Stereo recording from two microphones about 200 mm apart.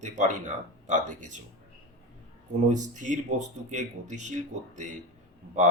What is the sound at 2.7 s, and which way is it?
Speech, 40° right (ahead or behind).